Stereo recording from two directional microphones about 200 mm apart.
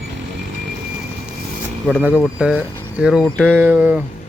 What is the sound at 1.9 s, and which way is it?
Speech, 5° right (ahead or behind).